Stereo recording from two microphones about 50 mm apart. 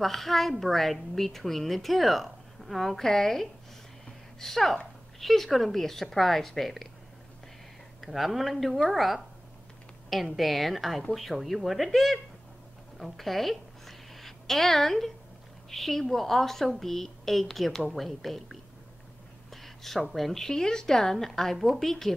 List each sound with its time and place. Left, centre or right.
0.0 s a woman's voice: centre
8.0 s a woman's voice: centre
12.9 s a sound: centre
15.7 s a woman's voice: centre